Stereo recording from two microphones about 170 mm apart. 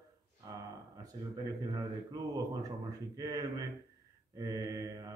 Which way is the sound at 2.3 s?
20° right (ahead or behind).